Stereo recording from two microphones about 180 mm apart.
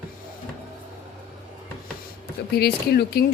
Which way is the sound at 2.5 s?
60° left (ahead or behind).